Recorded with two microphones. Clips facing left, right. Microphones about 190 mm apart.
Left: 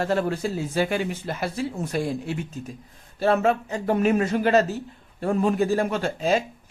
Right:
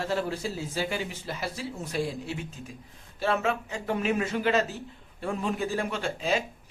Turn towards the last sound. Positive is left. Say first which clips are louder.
# left 6 dB
turn(degrees=45)  # may be behind; listen again after turning